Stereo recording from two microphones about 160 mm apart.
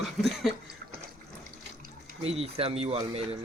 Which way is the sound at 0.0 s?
Centre (ahead or behind).